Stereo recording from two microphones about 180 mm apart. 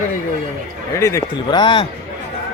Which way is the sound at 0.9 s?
15° left (ahead or behind).